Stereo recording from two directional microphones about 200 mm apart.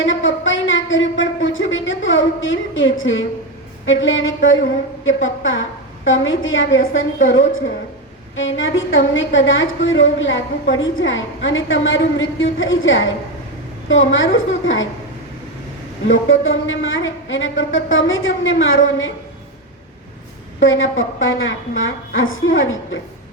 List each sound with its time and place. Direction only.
0.0 s a sound: 75° left (ahead or behind)
3.8 s a woman's voice: 75° left (ahead or behind)
16.0 s a woman's voice: 75° left (ahead or behind)
20.6 s a woman's voice: 75° left (ahead or behind)